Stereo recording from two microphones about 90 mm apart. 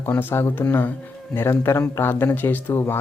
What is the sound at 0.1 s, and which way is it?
Speech, 20° left (ahead or behind).